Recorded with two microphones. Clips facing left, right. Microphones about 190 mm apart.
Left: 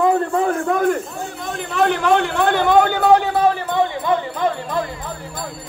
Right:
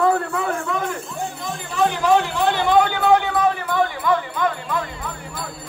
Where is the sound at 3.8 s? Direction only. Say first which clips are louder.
Left 1 dB; 30° left (ahead or behind).